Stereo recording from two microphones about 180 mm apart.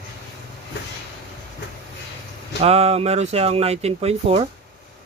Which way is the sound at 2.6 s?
35° right (ahead or behind).